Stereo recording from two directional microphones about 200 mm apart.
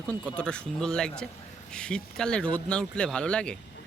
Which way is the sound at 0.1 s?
5° left (ahead or behind).